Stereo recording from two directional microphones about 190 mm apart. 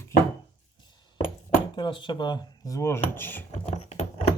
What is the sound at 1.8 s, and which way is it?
Speech, 25° left (ahead or behind).